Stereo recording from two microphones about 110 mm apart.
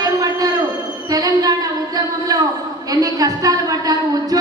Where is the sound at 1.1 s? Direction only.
35° right (ahead or behind).